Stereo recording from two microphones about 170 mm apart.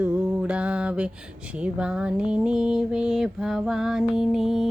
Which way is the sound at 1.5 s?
5° right (ahead or behind).